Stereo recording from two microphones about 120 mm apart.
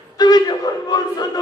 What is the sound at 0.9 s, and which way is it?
Speech, 35° left (ahead or behind).